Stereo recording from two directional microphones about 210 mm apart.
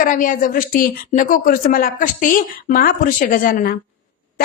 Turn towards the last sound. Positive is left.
turn(degrees=45)  # may be behind; listen again after turning